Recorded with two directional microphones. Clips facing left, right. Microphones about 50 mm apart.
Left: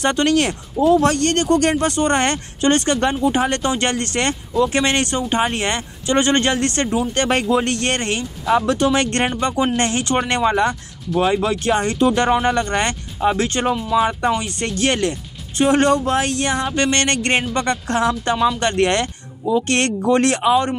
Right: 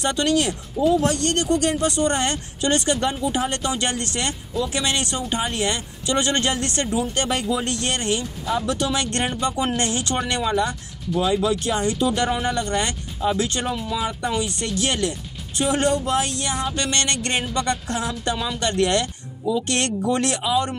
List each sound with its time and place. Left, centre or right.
0.0 s speech: left
8.5 s speech: left
8.7 s speech: left
13.5 s speech: left